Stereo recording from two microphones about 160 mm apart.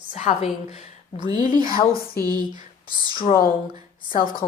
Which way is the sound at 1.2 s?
25° right (ahead or behind).